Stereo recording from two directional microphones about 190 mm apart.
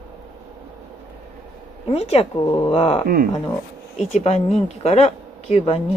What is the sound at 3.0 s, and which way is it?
Speech, 50° right (ahead or behind).